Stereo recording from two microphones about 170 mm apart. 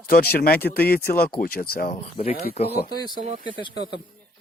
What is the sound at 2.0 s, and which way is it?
Speech, 35° left (ahead or behind).